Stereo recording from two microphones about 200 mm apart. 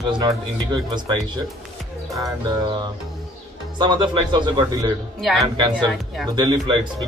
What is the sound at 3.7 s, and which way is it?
A man's voice, 20° right (ahead or behind).